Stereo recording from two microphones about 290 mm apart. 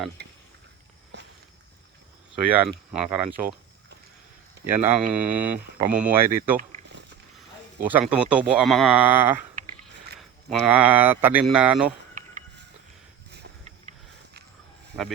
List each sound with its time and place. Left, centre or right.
0.2 s a sound: right
1.1 s walk: right
2.4 s speech: centre
4.6 s speech: centre
7.9 s speech: centre
13.3 s a sound: right